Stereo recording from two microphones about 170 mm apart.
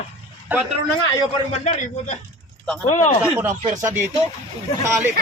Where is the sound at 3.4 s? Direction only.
15° right (ahead or behind).